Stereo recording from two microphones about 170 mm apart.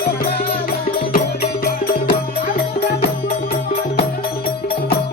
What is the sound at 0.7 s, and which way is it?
Music, 60° left (ahead or behind).